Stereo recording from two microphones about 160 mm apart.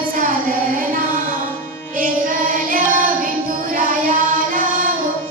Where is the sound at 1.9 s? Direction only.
60° right (ahead or behind).